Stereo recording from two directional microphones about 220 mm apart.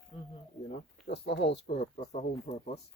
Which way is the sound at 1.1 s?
50° left (ahead or behind).